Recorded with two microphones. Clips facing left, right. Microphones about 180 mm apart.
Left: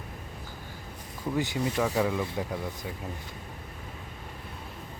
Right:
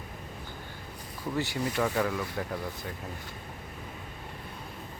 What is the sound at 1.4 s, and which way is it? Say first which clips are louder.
Speech: left 1 dB; 15° left (ahead or behind).